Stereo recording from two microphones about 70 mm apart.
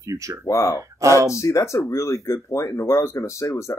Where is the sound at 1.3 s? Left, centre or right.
Left.